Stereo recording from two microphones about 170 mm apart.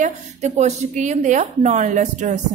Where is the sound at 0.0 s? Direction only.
40° right (ahead or behind).